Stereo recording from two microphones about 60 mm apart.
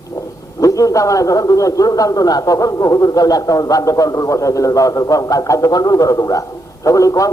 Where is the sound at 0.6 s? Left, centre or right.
Left.